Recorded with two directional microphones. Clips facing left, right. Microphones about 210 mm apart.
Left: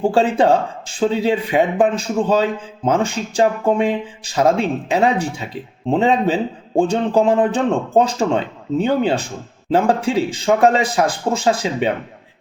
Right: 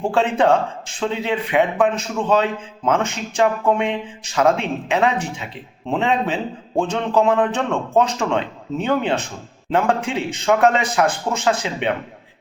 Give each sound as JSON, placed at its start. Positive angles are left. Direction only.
{"t": 0.0, "sound": "a man's voice", "side_deg": 35}